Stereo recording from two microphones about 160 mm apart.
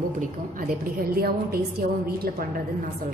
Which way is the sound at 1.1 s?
75° right (ahead or behind).